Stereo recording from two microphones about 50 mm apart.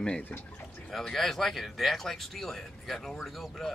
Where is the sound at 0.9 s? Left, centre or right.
Centre.